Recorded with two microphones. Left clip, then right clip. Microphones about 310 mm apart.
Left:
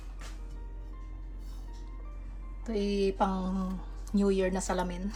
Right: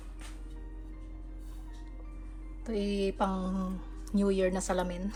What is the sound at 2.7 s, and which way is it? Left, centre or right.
Speech, centre.